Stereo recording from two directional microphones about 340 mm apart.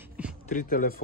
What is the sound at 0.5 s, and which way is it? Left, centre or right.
Speech, left.